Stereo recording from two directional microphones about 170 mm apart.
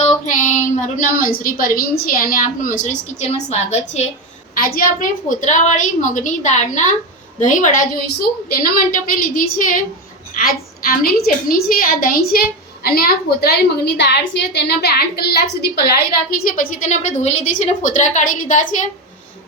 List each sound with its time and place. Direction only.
0.0 s a woman's voice: 45° left (ahead or behind)
4.5 s a woman's voice: 60° left (ahead or behind)